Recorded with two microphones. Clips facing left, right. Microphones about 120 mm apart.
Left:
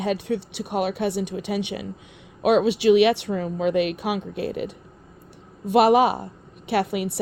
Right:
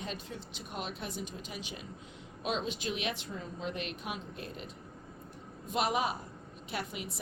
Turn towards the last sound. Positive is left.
turn(degrees=70)  # may be behind; listen again after turning